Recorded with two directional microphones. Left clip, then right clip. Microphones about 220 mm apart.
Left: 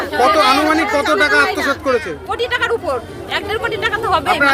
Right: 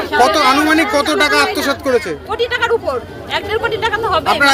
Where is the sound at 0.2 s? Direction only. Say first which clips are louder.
Right 1 dB; 30° right (ahead or behind).